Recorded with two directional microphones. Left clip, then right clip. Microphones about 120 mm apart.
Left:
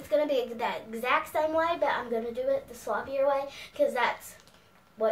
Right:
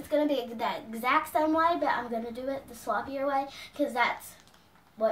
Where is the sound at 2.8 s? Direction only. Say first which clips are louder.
Right 1 dB; 15° left (ahead or behind).